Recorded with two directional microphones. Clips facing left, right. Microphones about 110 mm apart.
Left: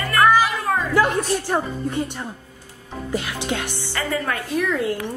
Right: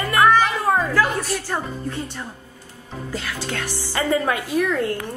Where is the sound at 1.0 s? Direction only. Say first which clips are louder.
Left 1 dB; centre (ahead or behind).